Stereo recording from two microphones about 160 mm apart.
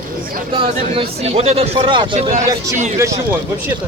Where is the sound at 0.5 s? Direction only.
35° right (ahead or behind).